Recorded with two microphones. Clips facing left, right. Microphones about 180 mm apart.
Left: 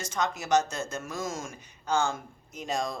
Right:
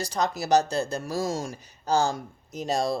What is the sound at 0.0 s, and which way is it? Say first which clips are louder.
Speech: right 4 dB; 35° right (ahead or behind).